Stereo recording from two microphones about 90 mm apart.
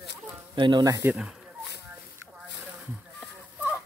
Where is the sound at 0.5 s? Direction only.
55° right (ahead or behind).